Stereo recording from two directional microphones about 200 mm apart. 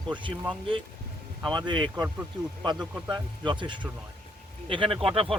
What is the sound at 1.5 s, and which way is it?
Speech, 25° right (ahead or behind).